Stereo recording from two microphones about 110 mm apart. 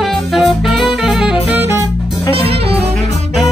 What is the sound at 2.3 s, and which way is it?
Music, 60° right (ahead or behind).